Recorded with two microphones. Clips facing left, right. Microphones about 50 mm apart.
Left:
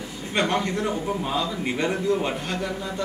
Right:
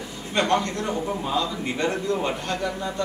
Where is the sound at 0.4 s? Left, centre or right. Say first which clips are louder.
Right 1 dB; centre.